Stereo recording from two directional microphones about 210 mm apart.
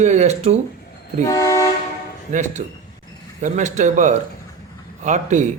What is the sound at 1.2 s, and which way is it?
Vehicle, 15° left (ahead or behind).